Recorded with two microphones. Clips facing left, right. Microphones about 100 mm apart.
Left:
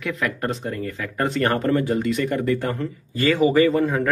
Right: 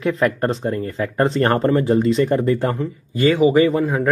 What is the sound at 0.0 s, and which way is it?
Speech, 35° right (ahead or behind).